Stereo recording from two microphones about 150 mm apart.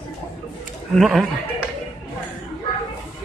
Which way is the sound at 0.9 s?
Centre (ahead or behind).